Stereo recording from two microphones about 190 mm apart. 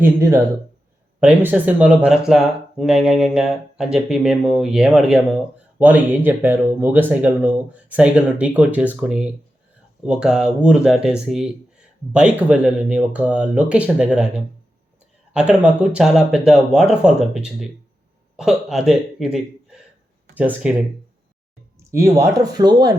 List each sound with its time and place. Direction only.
0.0 s speech: 15° right (ahead or behind)
21.8 s speech: 15° right (ahead or behind)